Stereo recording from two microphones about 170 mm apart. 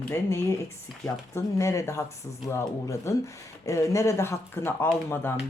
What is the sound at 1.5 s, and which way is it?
Speech, 15° left (ahead or behind).